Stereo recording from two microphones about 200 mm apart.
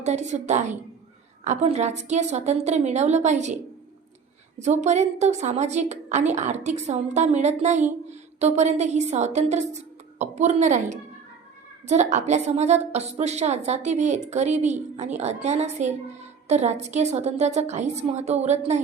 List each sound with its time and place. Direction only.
0.0 s a woman's voice: 35° right (ahead or behind)
4.8 s a woman's voice: 35° right (ahead or behind)